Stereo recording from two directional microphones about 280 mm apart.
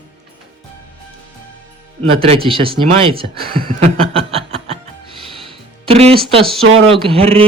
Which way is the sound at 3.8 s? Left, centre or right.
Centre.